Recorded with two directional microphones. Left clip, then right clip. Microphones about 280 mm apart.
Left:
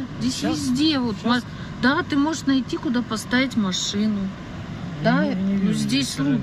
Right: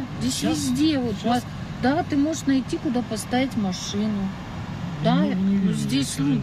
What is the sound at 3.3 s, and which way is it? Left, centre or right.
Speech, left.